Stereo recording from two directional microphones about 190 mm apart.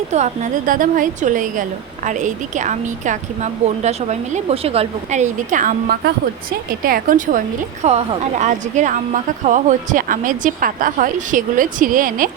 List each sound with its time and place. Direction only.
0.1 s a woman's voice: 40° right (ahead or behind)